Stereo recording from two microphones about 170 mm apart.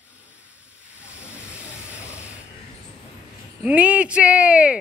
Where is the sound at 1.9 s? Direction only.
5° right (ahead or behind).